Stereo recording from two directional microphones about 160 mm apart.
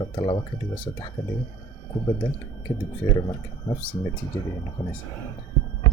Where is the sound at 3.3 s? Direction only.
30° left (ahead or behind).